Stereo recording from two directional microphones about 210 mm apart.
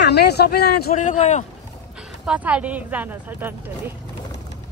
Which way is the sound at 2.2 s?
5° right (ahead or behind).